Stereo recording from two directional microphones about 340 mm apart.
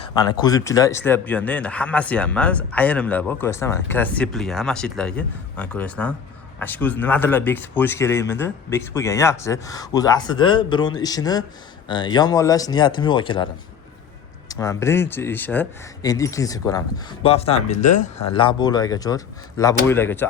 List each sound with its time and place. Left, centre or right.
0.0 s speech: centre